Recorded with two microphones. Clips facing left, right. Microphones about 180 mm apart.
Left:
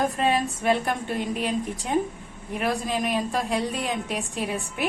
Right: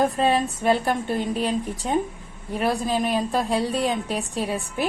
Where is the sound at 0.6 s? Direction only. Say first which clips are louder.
Right 3 dB; 30° right (ahead or behind).